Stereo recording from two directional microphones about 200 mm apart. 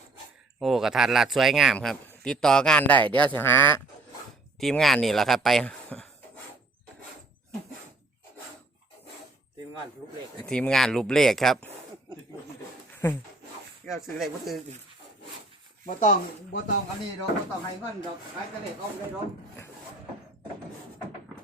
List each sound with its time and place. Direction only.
0.6 s a man's voice: centre (ahead or behind)
10.4 s a man's voice: 5° left (ahead or behind)
13.0 s speech: 15° left (ahead or behind)
13.8 s a man's voice: centre (ahead or behind)
15.9 s speech: 40° left (ahead or behind)